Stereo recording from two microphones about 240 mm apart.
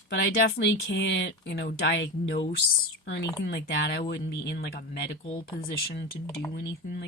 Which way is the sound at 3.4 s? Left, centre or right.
Left.